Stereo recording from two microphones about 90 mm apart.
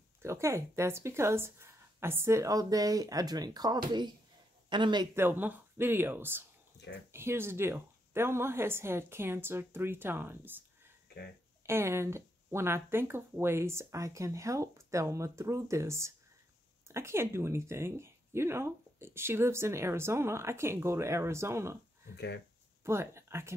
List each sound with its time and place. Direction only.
0.2 s a man's voice: 30° right (ahead or behind); by 5.0 s 60° right (ahead or behind)
5.1 s speech: 25° right (ahead or behind)
11.6 s speech: 30° right (ahead or behind)
22.8 s speech: 30° right (ahead or behind)